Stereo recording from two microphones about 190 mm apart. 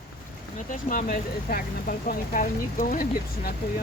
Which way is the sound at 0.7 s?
45° left (ahead or behind).